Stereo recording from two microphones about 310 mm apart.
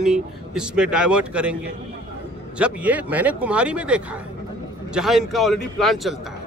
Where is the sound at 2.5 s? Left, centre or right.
Centre.